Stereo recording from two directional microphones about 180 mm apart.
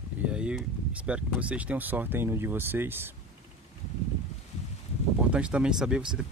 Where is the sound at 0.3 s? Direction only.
5° right (ahead or behind).